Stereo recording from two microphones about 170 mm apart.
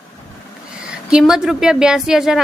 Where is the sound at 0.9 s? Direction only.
5° right (ahead or behind).